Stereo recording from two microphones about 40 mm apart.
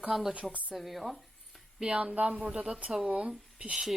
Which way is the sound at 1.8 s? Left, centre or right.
Right.